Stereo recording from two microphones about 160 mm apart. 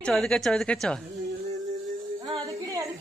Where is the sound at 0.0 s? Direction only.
5° left (ahead or behind).